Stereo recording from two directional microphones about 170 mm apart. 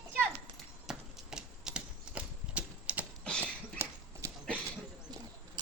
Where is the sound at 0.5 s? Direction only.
Centre (ahead or behind).